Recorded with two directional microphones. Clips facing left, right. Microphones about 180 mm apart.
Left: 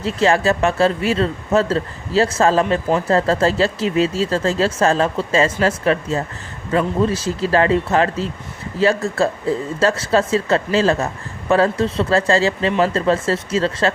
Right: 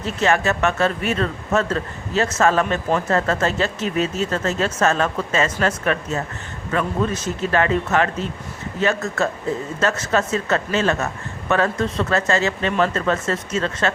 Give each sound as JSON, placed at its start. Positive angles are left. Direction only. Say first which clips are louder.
{"t": 0.0, "sound": "speech", "louder": "left 3 dB", "side_deg": 30}